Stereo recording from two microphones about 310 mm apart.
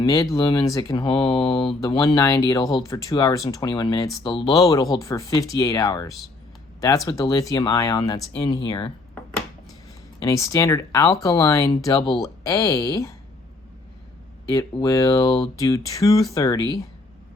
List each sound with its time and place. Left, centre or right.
0.0 s speech: centre
6.1 s speech: centre
6.8 s speech: centre
10.2 s speech: centre
14.5 s speech: centre